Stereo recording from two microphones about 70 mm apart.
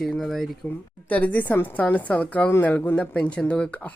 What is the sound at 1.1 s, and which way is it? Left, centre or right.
A woman's voice, left.